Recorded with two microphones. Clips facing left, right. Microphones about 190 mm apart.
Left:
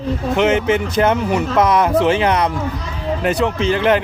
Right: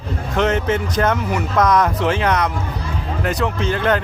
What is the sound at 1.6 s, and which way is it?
Speech, 25° left (ahead or behind).